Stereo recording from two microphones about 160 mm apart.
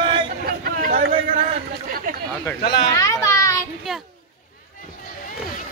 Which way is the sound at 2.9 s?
20° left (ahead or behind).